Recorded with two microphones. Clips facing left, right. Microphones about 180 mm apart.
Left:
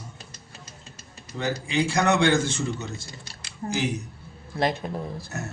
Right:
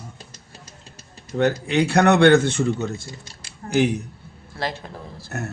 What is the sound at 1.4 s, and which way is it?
Speech, 65° right (ahead or behind).